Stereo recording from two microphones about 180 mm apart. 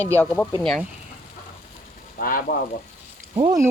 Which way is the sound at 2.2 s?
50° left (ahead or behind).